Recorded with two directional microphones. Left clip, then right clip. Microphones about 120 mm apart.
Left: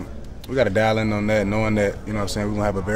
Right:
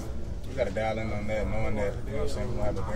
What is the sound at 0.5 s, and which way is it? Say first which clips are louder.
A man's voice: left 10 dB; 60° left (ahead or behind).